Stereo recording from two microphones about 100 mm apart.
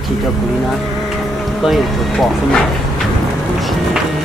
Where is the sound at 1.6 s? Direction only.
Centre (ahead or behind).